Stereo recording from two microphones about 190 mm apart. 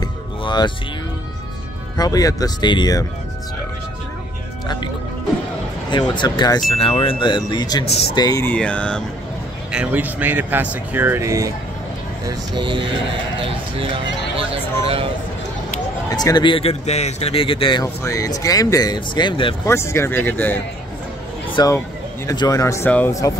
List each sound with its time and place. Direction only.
0.0 s music: 25° left (ahead or behind)
2.0 s speech: 20° left (ahead or behind)
5.9 s speech: 25° left (ahead or behind); by 9.0 s 5° left (ahead or behind)
9.7 s speech: 5° right (ahead or behind); by 12.9 s 25° right (ahead or behind)
16.1 s speech: 20° left (ahead or behind)
19.7 s speech: 15° left (ahead or behind)